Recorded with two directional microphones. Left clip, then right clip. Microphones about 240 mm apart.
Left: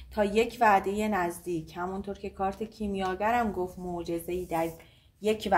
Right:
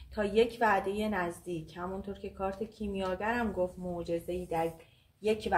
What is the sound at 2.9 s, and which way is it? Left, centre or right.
Speech, left.